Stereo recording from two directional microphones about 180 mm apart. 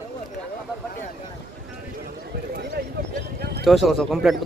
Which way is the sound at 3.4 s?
65° right (ahead or behind).